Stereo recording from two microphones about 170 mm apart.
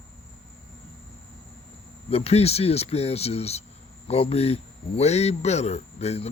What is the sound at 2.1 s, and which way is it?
Speech, 35° left (ahead or behind).